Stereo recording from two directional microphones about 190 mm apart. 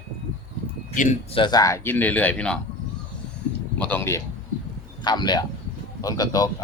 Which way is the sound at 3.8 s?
10° left (ahead or behind).